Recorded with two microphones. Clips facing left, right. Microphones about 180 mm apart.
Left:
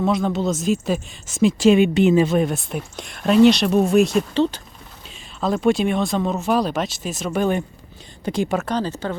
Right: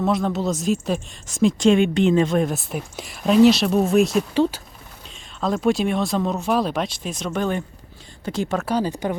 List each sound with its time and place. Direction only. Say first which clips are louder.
0.0 s speech: left 1 dB; centre (ahead or behind)
8.6 s speech: right 1 dB; 10° right (ahead or behind)